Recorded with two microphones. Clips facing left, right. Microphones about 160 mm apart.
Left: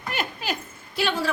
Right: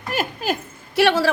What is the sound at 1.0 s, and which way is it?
Speech, 85° right.